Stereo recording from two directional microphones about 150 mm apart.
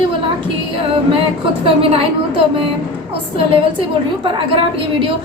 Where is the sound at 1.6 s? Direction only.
35° right (ahead or behind).